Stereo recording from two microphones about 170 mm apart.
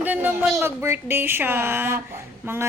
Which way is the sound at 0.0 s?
10° right (ahead or behind).